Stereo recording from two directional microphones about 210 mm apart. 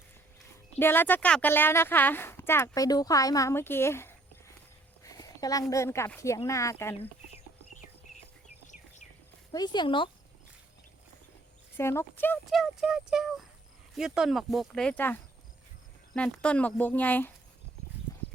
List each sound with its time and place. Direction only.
0.8 s a woman's voice: 10° left (ahead or behind)
9.5 s speech: 20° left (ahead or behind)
11.8 s a woman's voice: 10° left (ahead or behind)